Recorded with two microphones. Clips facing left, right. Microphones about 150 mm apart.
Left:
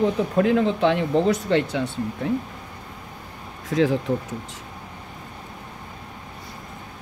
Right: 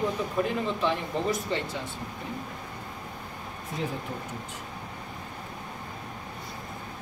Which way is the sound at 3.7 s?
90° left.